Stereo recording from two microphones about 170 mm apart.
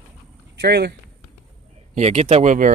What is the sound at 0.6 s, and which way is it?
Speech, 75° right (ahead or behind).